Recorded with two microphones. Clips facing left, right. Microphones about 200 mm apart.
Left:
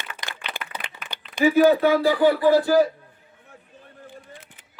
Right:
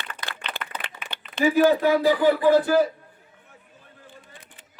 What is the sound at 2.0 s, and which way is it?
Speech, 20° right (ahead or behind).